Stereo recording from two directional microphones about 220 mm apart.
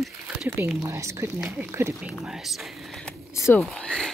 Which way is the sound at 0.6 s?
15° right (ahead or behind).